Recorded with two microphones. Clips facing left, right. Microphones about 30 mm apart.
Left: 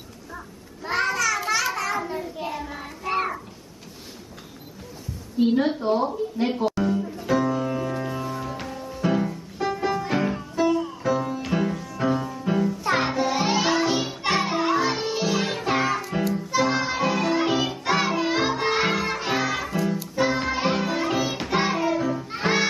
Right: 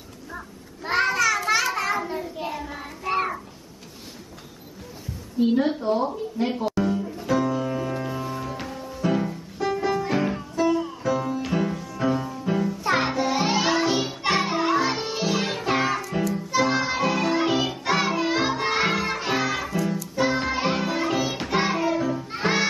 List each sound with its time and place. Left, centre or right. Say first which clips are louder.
0.8 s a sound: right 2 dB; centre
1.5 s child singing: right 2 dB; centre
5.4 s a woman's voice: left 1 dB; left
5.8 s speech: left 1 dB; centre
6.4 s music: even; centre
16.0 s music: even; centre